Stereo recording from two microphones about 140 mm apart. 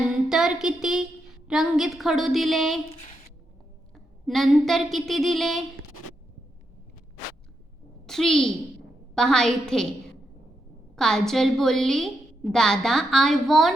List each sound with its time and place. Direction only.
0.1 s a sound: 5° right (ahead or behind)
1.5 s a woman's voice: centre (ahead or behind)
2.9 s speech: 45° left (ahead or behind)
3.9 s speech: centre (ahead or behind)
8.0 s a child's voice: 5° left (ahead or behind)
10.9 s a woman's voice: 5° left (ahead or behind)